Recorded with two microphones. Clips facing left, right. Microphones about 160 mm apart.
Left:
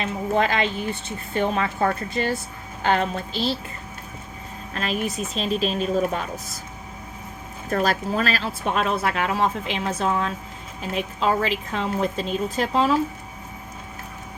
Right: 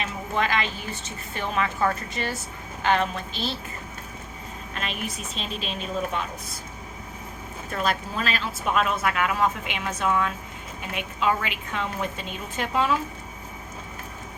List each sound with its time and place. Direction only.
0.0 s speech: 35° left (ahead or behind)
4.7 s speech: 40° left (ahead or behind)
7.7 s speech: 40° left (ahead or behind)